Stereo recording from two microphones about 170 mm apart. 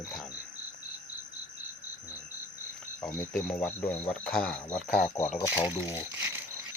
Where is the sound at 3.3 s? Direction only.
10° left (ahead or behind).